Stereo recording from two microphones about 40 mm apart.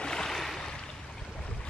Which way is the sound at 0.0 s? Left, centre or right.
Centre.